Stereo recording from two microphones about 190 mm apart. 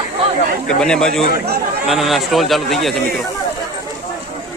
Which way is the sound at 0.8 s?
5° left (ahead or behind).